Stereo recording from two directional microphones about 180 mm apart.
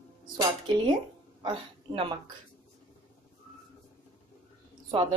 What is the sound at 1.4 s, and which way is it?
Speech, 25° right (ahead or behind).